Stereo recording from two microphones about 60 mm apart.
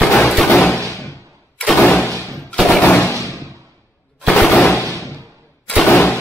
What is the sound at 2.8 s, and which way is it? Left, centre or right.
Gunshot, left.